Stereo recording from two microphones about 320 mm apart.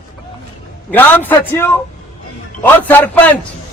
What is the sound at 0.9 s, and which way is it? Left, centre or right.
A man's voice, centre.